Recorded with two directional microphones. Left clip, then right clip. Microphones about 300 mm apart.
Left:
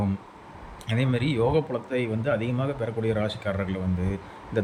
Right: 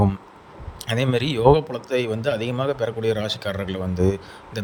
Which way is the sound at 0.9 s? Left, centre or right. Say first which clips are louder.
Right 5 dB; centre.